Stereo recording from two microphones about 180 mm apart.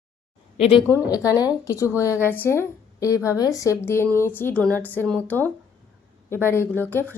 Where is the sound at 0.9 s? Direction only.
15° left (ahead or behind).